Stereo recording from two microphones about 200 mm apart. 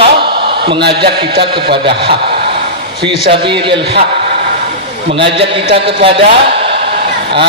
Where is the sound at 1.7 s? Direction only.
55° right (ahead or behind).